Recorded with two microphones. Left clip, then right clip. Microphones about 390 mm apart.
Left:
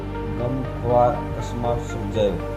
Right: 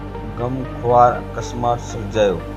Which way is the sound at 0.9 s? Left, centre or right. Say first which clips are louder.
Right 5 dB; centre.